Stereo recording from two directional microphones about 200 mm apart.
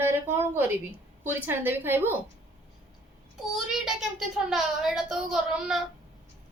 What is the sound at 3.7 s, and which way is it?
A woman's voice, centre (ahead or behind).